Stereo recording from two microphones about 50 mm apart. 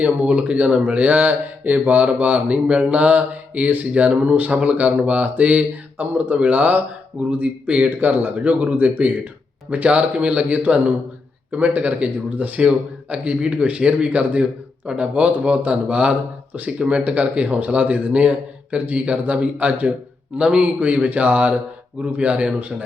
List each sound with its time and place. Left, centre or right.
0.0 s a man's voice: right
7.9 s a man's voice: right
20.4 s a man's voice: right